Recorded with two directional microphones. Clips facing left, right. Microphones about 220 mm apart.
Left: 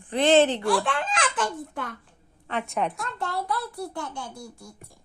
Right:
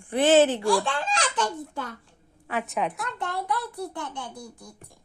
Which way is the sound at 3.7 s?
20° right (ahead or behind).